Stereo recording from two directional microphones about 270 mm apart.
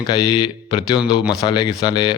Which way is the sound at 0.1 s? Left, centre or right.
Centre.